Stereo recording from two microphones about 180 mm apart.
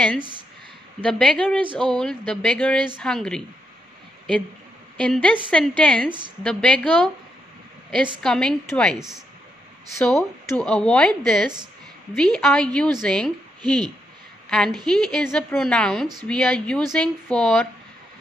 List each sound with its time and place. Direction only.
1.0 s a woman's voice: 5° left (ahead or behind)
4.9 s a woman's voice: 5° left (ahead or behind)
10.0 s a woman's voice: 5° left (ahead or behind)
13.6 s speech: 25° right (ahead or behind)
14.9 s a woman's voice: centre (ahead or behind)